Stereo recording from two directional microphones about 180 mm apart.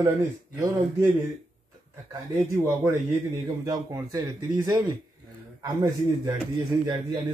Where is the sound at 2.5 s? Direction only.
15° right (ahead or behind).